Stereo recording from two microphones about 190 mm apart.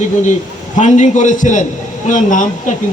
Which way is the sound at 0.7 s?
40° left (ahead or behind).